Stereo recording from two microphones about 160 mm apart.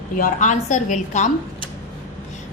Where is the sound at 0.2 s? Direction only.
50° left (ahead or behind).